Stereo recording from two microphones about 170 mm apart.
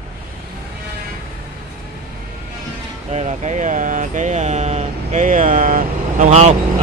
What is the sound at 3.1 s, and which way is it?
Speech, 45° right (ahead or behind).